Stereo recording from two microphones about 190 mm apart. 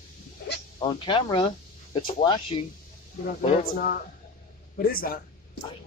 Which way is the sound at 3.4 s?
45° left (ahead or behind).